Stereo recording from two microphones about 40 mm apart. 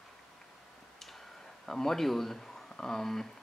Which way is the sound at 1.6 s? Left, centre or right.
Centre.